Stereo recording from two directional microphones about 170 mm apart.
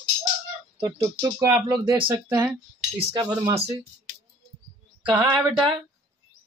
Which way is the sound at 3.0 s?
30° right (ahead or behind).